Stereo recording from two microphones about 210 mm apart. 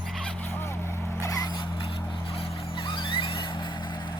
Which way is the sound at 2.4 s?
25° left (ahead or behind).